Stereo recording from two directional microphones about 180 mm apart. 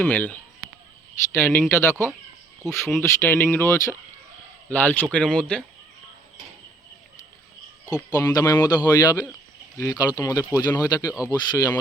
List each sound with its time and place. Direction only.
0.0 s speech: 10° left (ahead or behind)
7.9 s speech: 20° left (ahead or behind)
11.1 s speech: 5° right (ahead or behind)
11.3 s speech: 20° left (ahead or behind)